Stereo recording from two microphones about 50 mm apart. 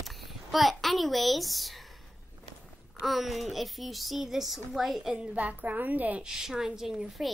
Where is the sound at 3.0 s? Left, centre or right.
Centre.